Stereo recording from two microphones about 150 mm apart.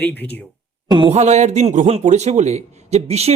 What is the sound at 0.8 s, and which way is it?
Speech, 30° right (ahead or behind).